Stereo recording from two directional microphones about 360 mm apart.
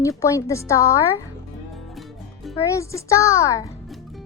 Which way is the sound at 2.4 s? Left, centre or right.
Centre.